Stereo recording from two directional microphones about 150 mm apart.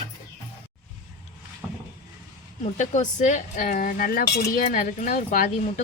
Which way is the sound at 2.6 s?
55° left (ahead or behind).